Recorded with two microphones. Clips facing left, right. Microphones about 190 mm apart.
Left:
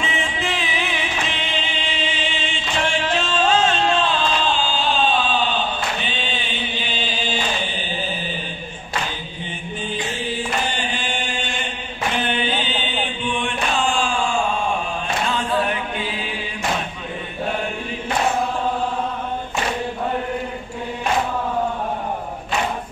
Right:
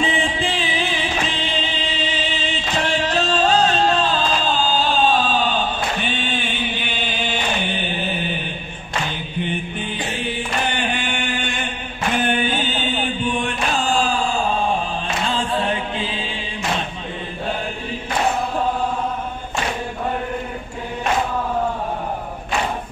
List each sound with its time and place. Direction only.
0.0 s music: 30° right (ahead or behind)
2.9 s music: 35° right (ahead or behind)
5.9 s chant: 50° right (ahead or behind)
10.7 s chant: 60° right (ahead or behind); by 14.4 s 35° right (ahead or behind)
15.2 s music: 30° right (ahead or behind)